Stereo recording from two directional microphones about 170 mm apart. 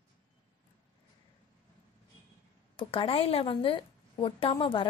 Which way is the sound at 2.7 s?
30° left (ahead or behind).